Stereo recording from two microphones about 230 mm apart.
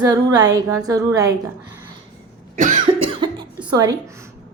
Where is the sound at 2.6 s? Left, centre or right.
Right.